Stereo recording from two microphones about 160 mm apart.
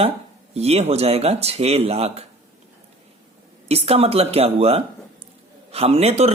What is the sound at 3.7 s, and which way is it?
Speech, 40° right (ahead or behind).